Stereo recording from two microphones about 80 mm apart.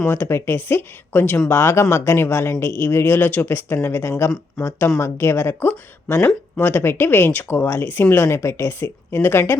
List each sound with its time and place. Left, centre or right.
0.1 s speech: left
4.6 s speech: centre
4.9 s speech: left